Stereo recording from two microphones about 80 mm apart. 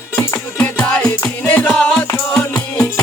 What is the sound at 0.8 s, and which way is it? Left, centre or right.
Music, centre.